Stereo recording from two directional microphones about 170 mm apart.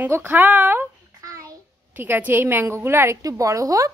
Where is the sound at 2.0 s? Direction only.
10° right (ahead or behind).